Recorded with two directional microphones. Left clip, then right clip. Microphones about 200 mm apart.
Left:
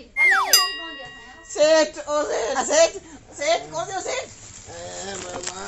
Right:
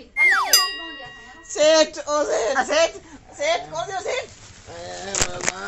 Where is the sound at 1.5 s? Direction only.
15° right (ahead or behind).